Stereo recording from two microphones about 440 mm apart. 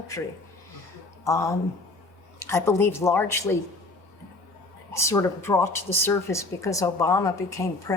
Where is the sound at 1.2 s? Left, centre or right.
Centre.